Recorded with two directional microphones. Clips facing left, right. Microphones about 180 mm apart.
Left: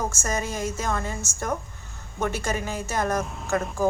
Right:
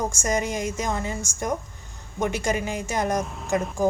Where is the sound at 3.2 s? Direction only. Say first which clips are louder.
Right 1 dB; centre (ahead or behind).